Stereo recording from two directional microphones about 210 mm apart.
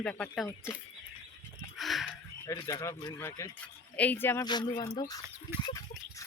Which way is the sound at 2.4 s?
15° left (ahead or behind).